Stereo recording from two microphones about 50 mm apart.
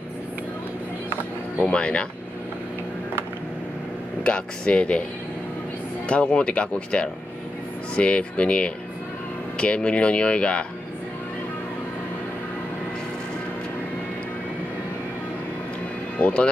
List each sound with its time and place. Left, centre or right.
1.7 s speech: left
4.2 s speech: left
6.0 s speech: left
16.2 s speech: left